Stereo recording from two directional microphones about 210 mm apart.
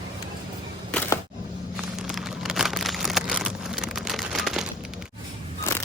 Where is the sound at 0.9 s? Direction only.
5° left (ahead or behind).